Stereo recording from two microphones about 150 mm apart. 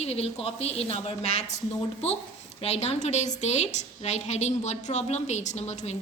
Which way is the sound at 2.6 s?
45° left (ahead or behind).